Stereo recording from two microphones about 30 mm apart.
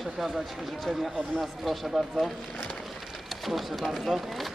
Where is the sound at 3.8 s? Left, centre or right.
Centre.